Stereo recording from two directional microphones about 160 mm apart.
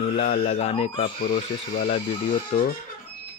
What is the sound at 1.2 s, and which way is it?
Speech, 70° left (ahead or behind).